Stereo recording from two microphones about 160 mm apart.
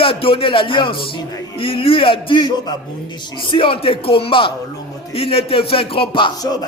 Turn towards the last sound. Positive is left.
turn(degrees=35)  # may be behind; listen again after turning